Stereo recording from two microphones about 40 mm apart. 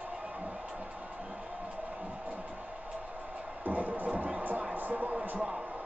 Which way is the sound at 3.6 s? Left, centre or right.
Right.